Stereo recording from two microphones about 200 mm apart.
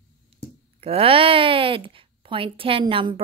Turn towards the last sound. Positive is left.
turn(degrees=-25)  # may be behind; listen again after turning